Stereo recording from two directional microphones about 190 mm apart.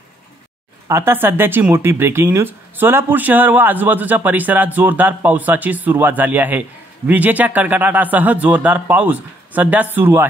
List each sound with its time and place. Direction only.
0.8 s speech: 15° right (ahead or behind)